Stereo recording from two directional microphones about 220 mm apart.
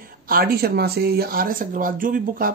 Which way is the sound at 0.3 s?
45° right (ahead or behind).